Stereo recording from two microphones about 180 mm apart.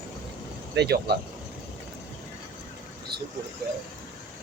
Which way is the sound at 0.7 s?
65° right (ahead or behind).